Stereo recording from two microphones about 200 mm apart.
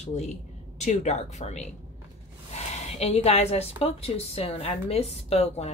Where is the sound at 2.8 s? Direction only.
30° left (ahead or behind).